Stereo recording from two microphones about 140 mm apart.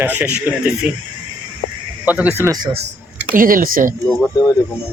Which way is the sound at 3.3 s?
80° right.